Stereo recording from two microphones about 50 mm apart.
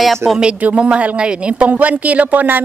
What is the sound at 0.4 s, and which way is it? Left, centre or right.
Speech, right.